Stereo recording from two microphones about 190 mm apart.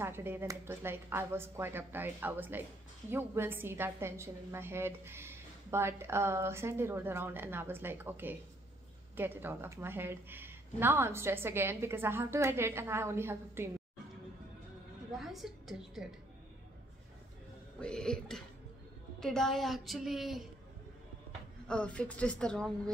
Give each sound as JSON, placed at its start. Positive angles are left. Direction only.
{"t": 0.0, "sound": "a woman's voice", "side_deg": -10}
{"t": 15.1, "sound": "a woman's voice", "side_deg": 0}
{"t": 17.7, "sound": "a woman's voice", "side_deg": 5}
{"t": 21.6, "sound": "a woman's voice", "side_deg": 5}